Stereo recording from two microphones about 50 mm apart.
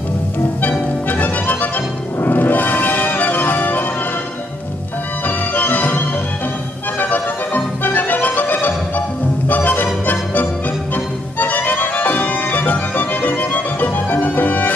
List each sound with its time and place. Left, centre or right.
0.6 s music: left
5.2 s music: left
11.3 s music: left